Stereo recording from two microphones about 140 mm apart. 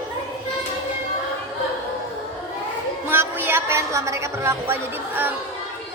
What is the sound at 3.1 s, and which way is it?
A woman's voice, 15° right (ahead or behind).